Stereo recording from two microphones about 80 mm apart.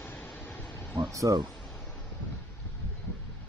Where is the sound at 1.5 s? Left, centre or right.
Centre.